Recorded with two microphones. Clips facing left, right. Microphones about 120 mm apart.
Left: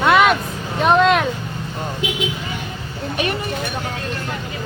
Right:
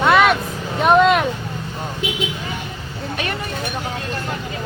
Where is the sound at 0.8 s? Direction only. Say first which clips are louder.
Right 1 dB; 5° right (ahead or behind).